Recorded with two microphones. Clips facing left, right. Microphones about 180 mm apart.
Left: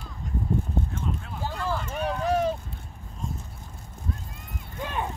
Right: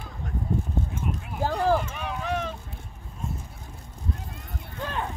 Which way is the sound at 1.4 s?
45° right (ahead or behind).